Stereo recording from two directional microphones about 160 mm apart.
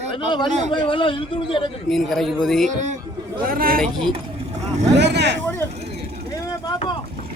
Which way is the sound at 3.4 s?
65° right (ahead or behind).